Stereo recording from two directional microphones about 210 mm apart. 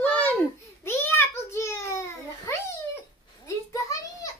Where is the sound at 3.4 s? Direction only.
15° left (ahead or behind).